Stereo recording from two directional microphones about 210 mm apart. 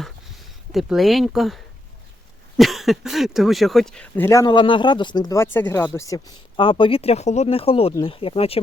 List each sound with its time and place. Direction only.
0.7 s speech: centre (ahead or behind); by 8.6 s 25° left (ahead or behind)